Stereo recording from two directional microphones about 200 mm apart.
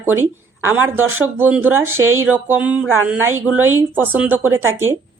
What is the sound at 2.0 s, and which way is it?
Speech, 90° right.